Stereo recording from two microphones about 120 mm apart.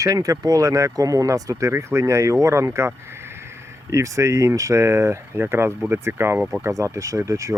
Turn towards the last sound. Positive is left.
turn(degrees=-25)  # may be behind; listen again after turning